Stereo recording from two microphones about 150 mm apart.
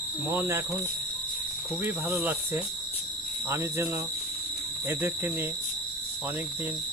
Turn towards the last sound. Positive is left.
turn(degrees=-15)  # may be behind; listen again after turning